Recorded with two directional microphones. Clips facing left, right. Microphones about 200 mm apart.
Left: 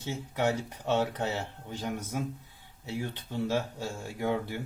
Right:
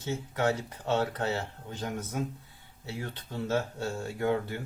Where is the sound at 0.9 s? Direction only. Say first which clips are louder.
Even; 15° left (ahead or behind).